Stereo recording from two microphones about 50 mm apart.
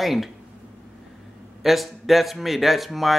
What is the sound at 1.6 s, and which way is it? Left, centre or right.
Speech, centre.